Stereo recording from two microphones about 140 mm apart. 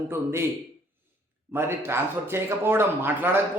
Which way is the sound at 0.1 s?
20° right (ahead or behind).